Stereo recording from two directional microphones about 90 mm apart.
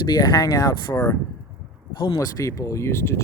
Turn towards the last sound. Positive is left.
turn(degrees=30)  # may be behind; listen again after turning